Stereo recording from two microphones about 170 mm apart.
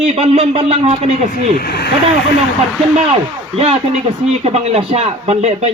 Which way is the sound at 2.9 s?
35° right (ahead or behind).